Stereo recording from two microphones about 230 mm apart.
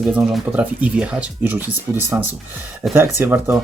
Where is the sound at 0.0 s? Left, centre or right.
Centre.